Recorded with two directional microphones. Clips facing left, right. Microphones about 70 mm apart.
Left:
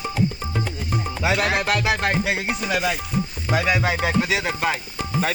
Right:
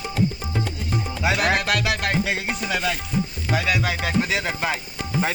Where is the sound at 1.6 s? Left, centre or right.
Left.